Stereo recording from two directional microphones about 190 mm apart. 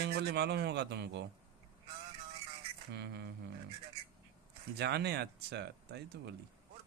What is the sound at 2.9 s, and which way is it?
Speech, 60° right (ahead or behind).